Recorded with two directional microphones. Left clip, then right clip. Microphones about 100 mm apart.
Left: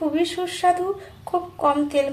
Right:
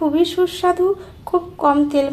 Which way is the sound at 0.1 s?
35° right (ahead or behind).